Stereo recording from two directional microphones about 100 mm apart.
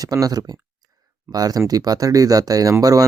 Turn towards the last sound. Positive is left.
turn(degrees=-35)  # may be behind; listen again after turning